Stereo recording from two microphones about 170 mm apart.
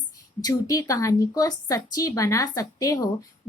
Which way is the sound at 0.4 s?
20° left (ahead or behind).